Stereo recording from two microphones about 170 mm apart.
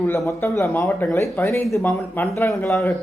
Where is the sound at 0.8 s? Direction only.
5° left (ahead or behind).